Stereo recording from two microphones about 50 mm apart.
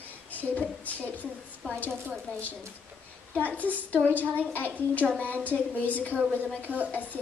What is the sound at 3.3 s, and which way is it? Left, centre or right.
A woman's voice, left.